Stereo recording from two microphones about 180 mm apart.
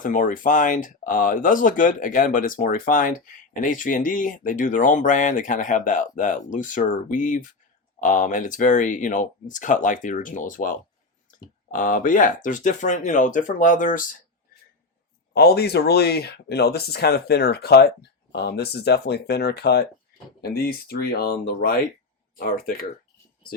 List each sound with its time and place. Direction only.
0.0 s speech: 45° left (ahead or behind)
15.3 s speech: 60° left (ahead or behind)